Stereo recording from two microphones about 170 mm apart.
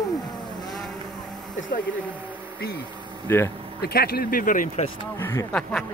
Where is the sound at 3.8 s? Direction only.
65° left (ahead or behind).